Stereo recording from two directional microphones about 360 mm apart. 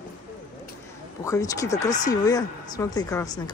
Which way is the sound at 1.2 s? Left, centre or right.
Centre.